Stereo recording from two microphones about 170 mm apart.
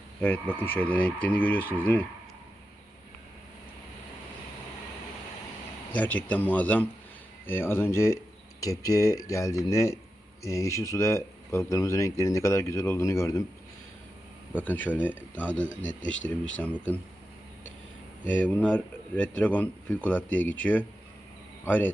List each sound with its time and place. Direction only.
0.2 s speech: 10° left (ahead or behind)
5.9 s speech: 10° left (ahead or behind)
14.6 s speech: 10° left (ahead or behind)
18.3 s speech: 10° left (ahead or behind)